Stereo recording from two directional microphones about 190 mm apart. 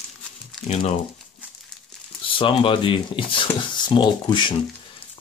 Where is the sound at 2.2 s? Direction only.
25° left (ahead or behind).